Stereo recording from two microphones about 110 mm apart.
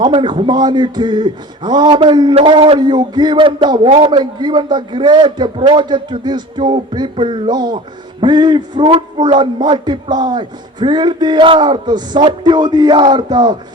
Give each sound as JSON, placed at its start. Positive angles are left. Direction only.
{"t": 0.0, "sound": "speech", "side_deg": -45}